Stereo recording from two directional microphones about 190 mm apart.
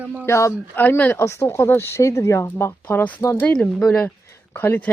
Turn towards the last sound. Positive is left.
turn(degrees=10)  # may be behind; listen again after turning